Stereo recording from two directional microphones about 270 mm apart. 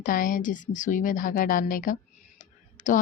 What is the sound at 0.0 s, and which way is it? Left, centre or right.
A woman's voice, left.